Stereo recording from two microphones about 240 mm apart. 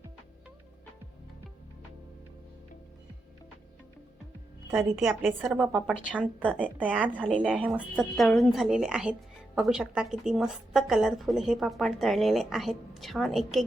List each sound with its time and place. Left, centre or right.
4.7 s a woman's voice: centre
6.7 s a woman's voice: centre